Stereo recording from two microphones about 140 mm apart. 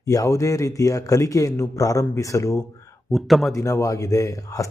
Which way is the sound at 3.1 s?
Centre (ahead or behind).